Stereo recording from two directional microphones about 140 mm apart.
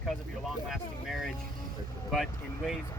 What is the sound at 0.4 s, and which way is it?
Speech, centre (ahead or behind).